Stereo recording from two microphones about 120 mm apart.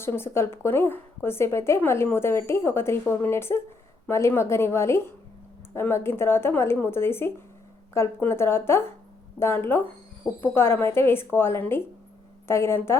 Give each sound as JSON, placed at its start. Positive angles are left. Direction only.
{"t": 0.0, "sound": "a woman's voice", "side_deg": 20}